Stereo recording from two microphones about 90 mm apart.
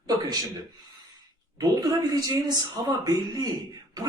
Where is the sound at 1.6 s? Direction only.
45° right (ahead or behind).